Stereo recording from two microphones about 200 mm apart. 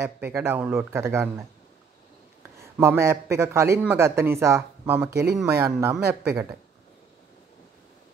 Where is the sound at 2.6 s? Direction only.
15° right (ahead or behind).